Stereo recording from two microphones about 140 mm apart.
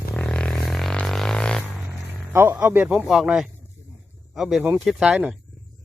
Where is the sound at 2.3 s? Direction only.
15° right (ahead or behind).